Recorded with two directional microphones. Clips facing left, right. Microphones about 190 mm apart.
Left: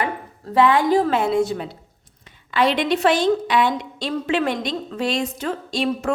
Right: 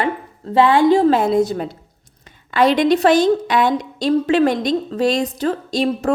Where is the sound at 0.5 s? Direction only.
30° right (ahead or behind).